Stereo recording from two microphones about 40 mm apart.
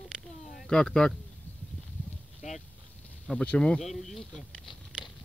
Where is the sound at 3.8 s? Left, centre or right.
Centre.